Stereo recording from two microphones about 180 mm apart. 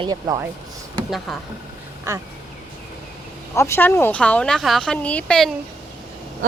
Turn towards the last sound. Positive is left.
turn(degrees=5)  # may be behind; listen again after turning